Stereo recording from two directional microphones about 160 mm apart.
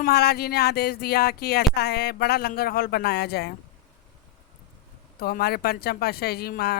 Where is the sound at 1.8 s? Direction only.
90° left.